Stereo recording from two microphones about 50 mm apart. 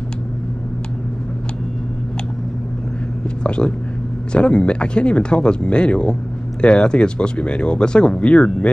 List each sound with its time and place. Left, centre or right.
3.4 s speech: left